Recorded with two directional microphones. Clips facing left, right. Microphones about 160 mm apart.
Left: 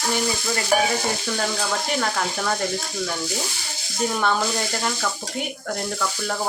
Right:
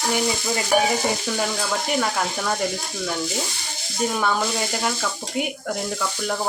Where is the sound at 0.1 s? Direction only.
20° right (ahead or behind).